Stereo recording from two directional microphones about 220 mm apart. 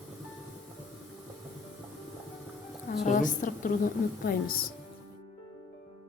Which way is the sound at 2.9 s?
35° left (ahead or behind).